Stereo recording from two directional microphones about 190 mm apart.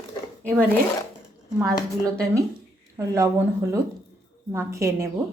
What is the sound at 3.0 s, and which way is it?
A woman's voice, 15° right (ahead or behind).